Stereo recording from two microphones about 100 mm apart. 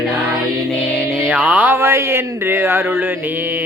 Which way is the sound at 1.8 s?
25° right (ahead or behind).